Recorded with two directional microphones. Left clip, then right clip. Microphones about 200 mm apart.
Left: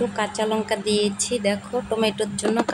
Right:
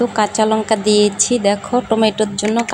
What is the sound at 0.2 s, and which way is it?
Speech, 20° right (ahead or behind).